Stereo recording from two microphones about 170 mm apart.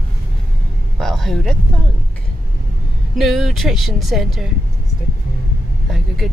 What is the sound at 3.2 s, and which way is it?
Speech, centre (ahead or behind).